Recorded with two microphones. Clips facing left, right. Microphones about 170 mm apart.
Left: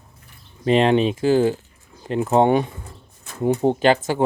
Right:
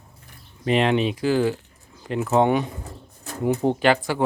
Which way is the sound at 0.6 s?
30° left (ahead or behind).